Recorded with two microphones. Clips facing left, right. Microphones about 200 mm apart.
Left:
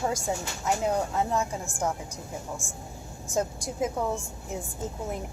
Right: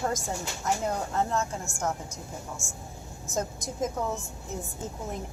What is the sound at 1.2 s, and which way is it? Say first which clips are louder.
Speech: right 3 dB; 10° left (ahead or behind).